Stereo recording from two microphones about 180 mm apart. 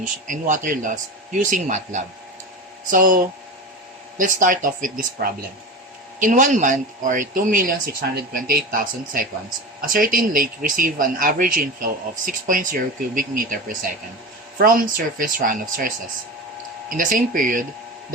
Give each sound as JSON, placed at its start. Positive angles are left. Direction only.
{"t": 0.3, "sound": "a man's voice", "side_deg": -45}
{"t": 17.0, "sound": "a man's voice", "side_deg": -50}